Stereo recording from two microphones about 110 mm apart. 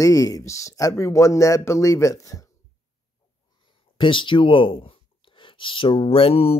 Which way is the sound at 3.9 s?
50° left (ahead or behind).